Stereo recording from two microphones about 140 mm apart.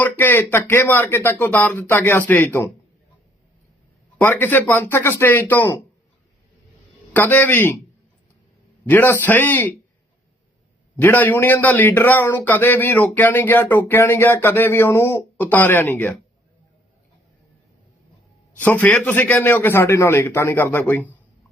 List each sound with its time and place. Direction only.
0.0 s a man's voice: 15° left (ahead or behind)
4.2 s a man's voice: 15° left (ahead or behind)
7.1 s a man's voice: 15° left (ahead or behind)
8.9 s a man's voice: 15° left (ahead or behind)
10.9 s a man's voice: 15° left (ahead or behind)
18.6 s a man's voice: 10° left (ahead or behind)